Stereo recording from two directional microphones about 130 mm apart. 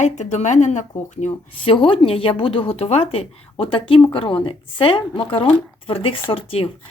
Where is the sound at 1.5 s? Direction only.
40° left (ahead or behind).